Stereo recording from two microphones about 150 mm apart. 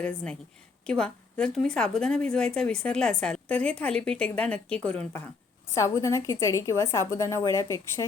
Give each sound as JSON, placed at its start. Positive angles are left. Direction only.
{"t": 0.0, "sound": "a woman's voice", "side_deg": 5}